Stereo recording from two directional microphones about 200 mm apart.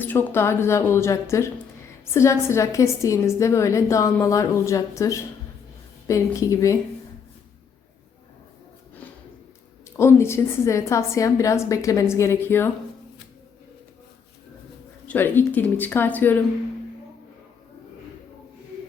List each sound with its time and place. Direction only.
0.0 s a woman's voice: 10° left (ahead or behind)
10.0 s a woman's voice: 15° left (ahead or behind)
15.0 s a woman's voice: 10° left (ahead or behind)